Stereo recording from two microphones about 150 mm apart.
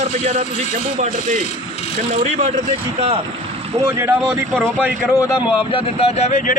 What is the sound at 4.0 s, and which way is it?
Speech, 15° right (ahead or behind).